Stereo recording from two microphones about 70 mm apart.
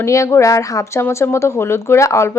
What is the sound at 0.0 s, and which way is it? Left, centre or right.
Speech, left.